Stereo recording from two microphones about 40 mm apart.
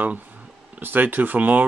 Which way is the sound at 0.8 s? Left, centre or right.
Right.